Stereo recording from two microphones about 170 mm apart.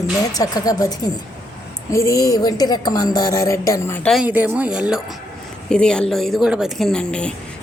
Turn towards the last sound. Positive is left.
turn(degrees=5)  # may be behind; listen again after turning